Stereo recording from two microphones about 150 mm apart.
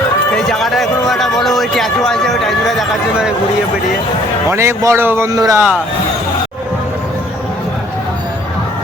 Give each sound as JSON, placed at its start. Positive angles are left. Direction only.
{"t": 0.3, "sound": "speech", "side_deg": 0}
{"t": 4.4, "sound": "a man's voice", "side_deg": -20}